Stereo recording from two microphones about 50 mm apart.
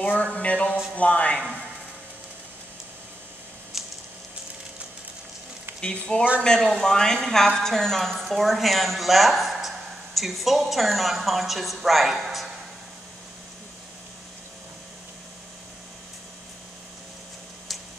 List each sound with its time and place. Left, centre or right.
0.0 s speech: left
3.8 s squish: centre
5.7 s a sound: right
6.1 s a woman's voice: centre